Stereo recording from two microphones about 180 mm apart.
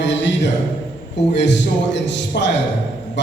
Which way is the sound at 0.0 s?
90° left.